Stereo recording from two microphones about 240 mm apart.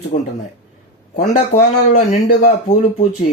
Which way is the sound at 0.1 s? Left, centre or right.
Left.